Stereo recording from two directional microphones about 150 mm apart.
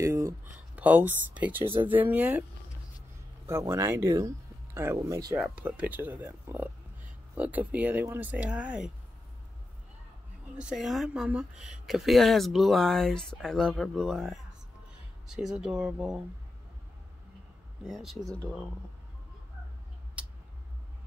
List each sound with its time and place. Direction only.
0.0 s speech: 20° right (ahead or behind)
3.4 s speech: 20° right (ahead or behind)
5.4 s speech: 10° right (ahead or behind)
10.6 s speech: 5° right (ahead or behind)
17.8 s speech: centre (ahead or behind)